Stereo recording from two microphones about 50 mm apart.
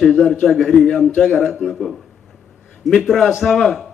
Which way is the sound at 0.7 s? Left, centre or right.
Centre.